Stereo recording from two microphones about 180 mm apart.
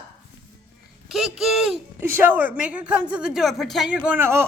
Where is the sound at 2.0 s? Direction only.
10° right (ahead or behind).